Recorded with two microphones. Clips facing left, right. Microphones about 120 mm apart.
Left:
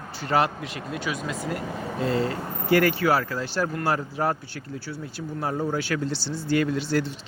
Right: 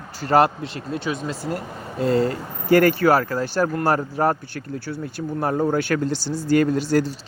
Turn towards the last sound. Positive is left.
turn(degrees=-40)  # may be behind; listen again after turning